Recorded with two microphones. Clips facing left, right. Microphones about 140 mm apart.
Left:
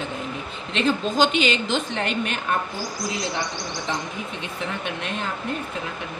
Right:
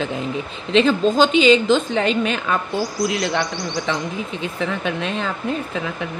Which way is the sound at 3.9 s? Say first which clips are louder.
Right 4 dB; 90° right.